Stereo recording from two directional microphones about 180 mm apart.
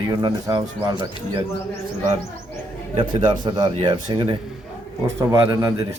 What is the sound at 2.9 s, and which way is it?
A man's voice, 30° right (ahead or behind).